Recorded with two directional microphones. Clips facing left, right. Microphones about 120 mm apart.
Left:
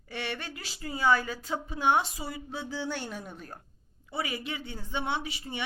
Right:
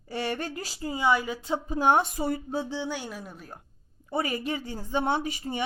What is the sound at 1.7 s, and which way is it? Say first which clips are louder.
Speech: right 3 dB; 45° right (ahead or behind).